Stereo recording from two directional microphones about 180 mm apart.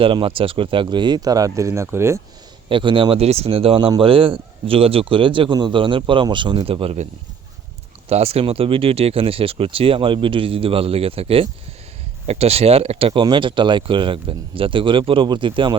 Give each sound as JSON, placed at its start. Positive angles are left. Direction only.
{"t": 0.0, "sound": "speech", "side_deg": -30}
{"t": 2.6, "sound": "speech", "side_deg": -30}
{"t": 8.1, "sound": "speech", "side_deg": -35}